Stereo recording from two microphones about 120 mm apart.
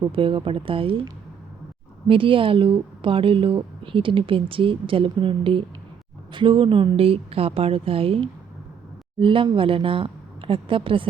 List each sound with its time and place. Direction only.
0.1 s a woman's voice: 45° right (ahead or behind)
2.0 s a woman's voice: 45° right (ahead or behind)